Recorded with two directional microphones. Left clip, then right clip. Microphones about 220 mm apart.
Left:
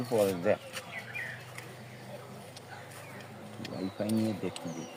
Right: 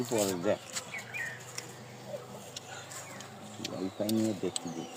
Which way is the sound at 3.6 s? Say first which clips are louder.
Right 1 dB; 40° right (ahead or behind).